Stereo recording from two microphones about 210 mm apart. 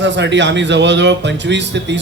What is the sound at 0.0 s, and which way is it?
Speech, 55° right (ahead or behind).